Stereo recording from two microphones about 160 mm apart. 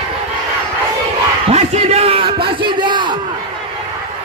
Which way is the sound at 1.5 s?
40° right (ahead or behind).